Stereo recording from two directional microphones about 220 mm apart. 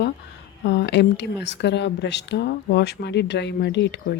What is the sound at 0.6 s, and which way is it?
Speech, 50° left (ahead or behind).